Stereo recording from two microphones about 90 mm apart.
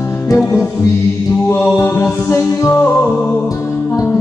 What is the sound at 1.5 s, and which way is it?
Mantra, 30° left (ahead or behind).